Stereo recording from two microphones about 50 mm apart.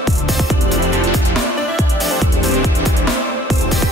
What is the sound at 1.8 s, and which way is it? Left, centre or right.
Music, centre.